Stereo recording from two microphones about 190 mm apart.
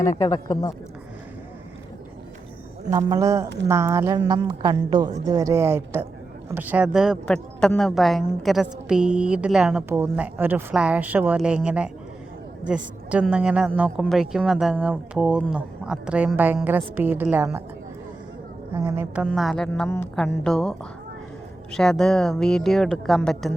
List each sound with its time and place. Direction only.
0.2 s speech: 20° left (ahead or behind)
3.1 s a woman's voice: 15° right (ahead or behind)
18.7 s speech: 15° right (ahead or behind)
19.2 s a woman's voice: centre (ahead or behind)